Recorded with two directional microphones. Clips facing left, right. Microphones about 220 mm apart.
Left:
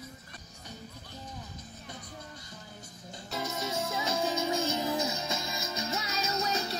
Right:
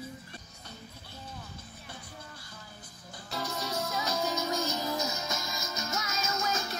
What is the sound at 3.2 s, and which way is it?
Music, 20° left (ahead or behind).